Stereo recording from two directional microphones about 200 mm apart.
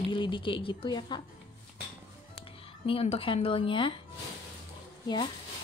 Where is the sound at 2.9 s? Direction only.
30° left (ahead or behind).